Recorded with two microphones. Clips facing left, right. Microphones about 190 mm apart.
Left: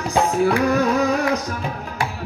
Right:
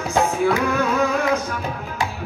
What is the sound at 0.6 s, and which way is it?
Music, 35° left (ahead or behind).